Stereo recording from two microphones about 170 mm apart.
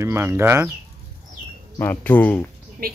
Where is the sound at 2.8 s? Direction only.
60° right (ahead or behind).